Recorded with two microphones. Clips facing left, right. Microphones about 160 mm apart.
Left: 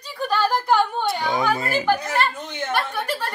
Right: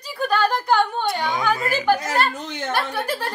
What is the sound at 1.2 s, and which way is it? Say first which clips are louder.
Speech: left 1 dB; 30° left (ahead or behind).